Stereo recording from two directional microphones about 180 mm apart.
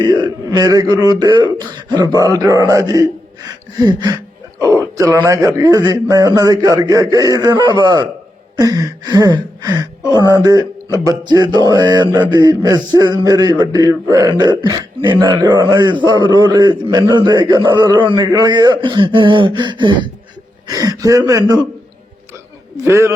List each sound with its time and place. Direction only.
0.0 s speech: 25° right (ahead or behind)
22.8 s a man's voice: 15° right (ahead or behind)